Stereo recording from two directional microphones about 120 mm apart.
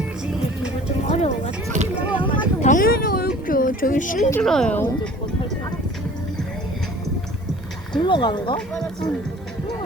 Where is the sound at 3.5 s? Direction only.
90° left.